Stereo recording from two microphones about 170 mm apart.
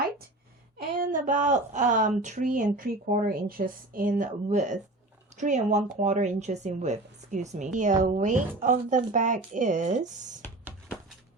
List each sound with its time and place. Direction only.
0.8 s speech: 55° right (ahead or behind)